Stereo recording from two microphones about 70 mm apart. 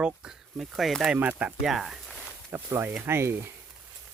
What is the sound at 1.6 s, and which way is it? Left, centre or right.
Speech, centre.